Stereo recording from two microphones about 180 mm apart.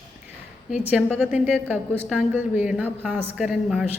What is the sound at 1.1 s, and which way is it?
Speech, centre (ahead or behind).